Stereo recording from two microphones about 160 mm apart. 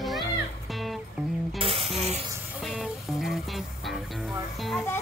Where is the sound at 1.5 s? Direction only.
35° right (ahead or behind).